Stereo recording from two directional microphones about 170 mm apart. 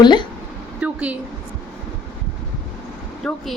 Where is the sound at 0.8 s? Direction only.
10° right (ahead or behind).